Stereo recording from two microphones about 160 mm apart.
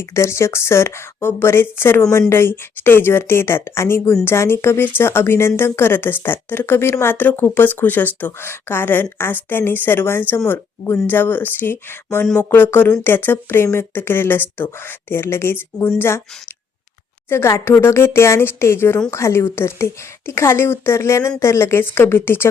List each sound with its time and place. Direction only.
0.0 s speech: 15° left (ahead or behind)
17.2 s speech: 15° left (ahead or behind)